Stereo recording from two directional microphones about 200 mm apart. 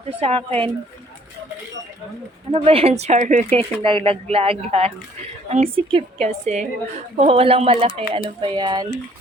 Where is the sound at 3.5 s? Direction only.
25° right (ahead or behind).